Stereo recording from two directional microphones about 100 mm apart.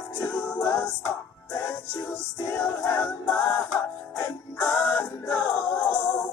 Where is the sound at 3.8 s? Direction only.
30° left (ahead or behind).